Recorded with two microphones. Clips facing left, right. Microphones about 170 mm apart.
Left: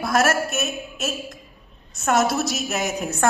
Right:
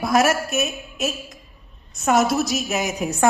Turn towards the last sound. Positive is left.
turn(degrees=0)  # may be behind; listen again after turning